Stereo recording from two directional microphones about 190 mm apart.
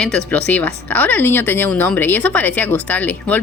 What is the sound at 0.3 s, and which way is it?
Speech, 10° left (ahead or behind).